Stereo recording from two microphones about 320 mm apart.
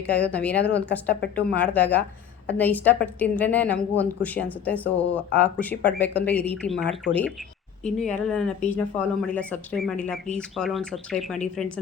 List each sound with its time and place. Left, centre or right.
0.0 s speech: centre
1.2 s speech: left
1.5 s speech: centre